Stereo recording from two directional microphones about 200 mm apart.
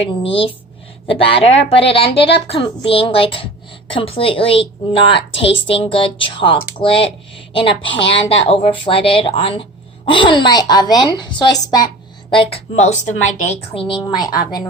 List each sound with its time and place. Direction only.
0.0 s speech: 25° left (ahead or behind)